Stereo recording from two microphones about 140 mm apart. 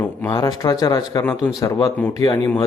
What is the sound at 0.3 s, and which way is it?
Speech, 30° left (ahead or behind).